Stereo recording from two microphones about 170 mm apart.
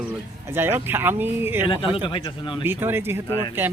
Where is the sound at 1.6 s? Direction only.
30° left (ahead or behind).